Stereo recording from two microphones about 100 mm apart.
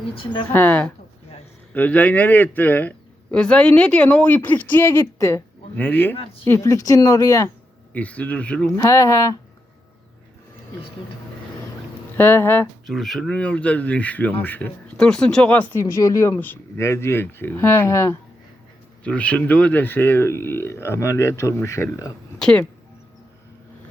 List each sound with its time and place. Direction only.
0.2 s a woman's voice: 55° left (ahead or behind)
0.5 s speech: 20° left (ahead or behind)
6.1 s speech: 75° left (ahead or behind)
6.4 s speech: 25° left (ahead or behind)
7.9 s speech: 15° left (ahead or behind)
8.7 s speech: 35° left (ahead or behind)
12.1 s speech: 20° left (ahead or behind)
12.9 s speech: centre (ahead or behind); by 14.7 s 20° left (ahead or behind)
14.9 s speech: 5° left (ahead or behind)
15.8 s speech: 30° left (ahead or behind)
19.0 s speech: 15° left (ahead or behind); by 22.1 s 30° left (ahead or behind)
22.4 s speech: 5° left (ahead or behind)